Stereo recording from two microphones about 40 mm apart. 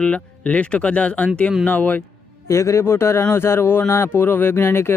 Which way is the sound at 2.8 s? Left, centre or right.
Left.